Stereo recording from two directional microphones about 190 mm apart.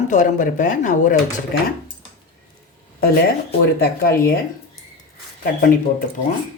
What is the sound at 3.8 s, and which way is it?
Speech, 50° left (ahead or behind).